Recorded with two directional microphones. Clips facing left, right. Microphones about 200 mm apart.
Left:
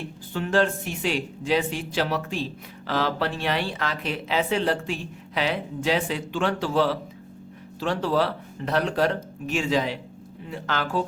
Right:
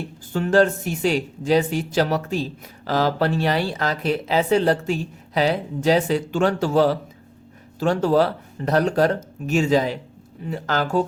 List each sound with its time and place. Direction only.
0.3 s speech: 40° right (ahead or behind)